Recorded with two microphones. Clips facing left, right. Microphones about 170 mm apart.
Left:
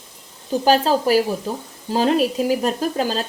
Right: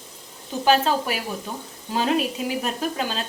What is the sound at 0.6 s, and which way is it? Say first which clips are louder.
Speech: left 3 dB; 35° left (ahead or behind).